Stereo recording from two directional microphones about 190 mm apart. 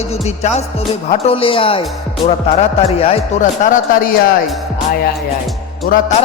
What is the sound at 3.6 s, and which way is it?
Speech, 45° left (ahead or behind).